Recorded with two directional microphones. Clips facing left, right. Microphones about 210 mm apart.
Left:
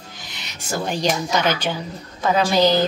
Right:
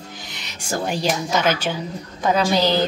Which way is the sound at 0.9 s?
5° right (ahead or behind).